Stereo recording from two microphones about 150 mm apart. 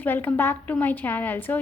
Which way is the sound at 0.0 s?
10° left (ahead or behind).